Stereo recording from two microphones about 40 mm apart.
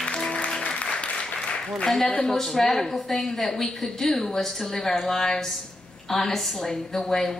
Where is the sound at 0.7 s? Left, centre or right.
Left.